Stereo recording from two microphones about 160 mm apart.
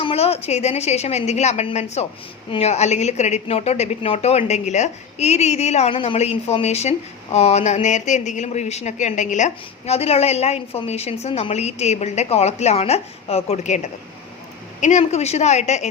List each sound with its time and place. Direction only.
0.0 s a woman's voice: 40° left (ahead or behind)